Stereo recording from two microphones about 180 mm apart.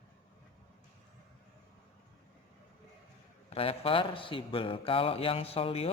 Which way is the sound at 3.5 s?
30° left (ahead or behind).